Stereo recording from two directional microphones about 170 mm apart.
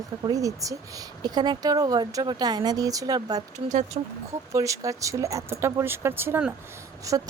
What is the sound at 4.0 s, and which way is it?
Speech, 35° right (ahead or behind).